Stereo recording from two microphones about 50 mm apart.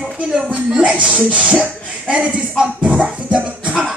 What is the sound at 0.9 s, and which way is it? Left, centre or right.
Speech, right.